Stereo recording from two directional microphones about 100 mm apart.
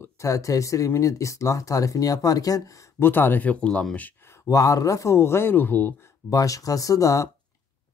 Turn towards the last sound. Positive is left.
turn(degrees=35)  # may be behind; listen again after turning